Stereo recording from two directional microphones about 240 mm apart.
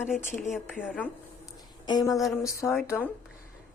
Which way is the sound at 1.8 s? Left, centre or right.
Centre.